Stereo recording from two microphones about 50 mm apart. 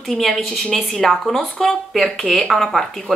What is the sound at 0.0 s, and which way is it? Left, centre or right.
Speech, centre.